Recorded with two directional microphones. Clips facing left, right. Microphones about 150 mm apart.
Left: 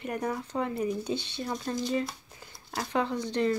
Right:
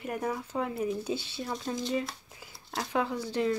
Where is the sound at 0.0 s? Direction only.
5° right (ahead or behind).